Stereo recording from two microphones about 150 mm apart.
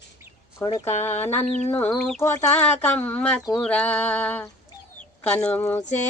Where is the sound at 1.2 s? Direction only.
15° left (ahead or behind).